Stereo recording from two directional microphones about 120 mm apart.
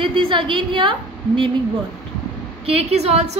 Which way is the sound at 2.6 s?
60° right (ahead or behind).